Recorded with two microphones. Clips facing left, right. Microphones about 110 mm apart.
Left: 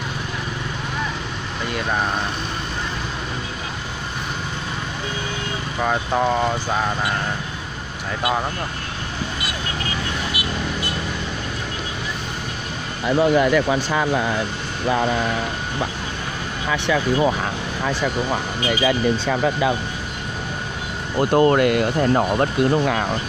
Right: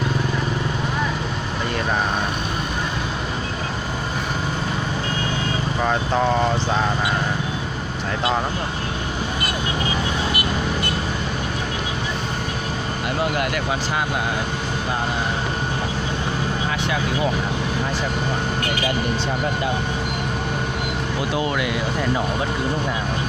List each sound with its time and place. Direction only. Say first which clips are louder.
21.2 s speech: left 10 dB; 50° left (ahead or behind)